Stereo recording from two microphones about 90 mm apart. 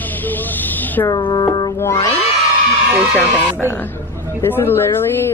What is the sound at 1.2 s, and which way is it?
Music, 50° left (ahead or behind).